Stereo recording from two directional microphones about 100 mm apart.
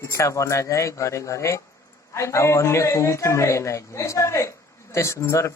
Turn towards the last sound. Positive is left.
turn(degrees=30)  # may be behind; listen again after turning